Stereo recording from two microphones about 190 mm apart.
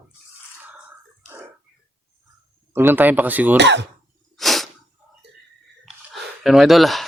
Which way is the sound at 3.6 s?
65° right (ahead or behind).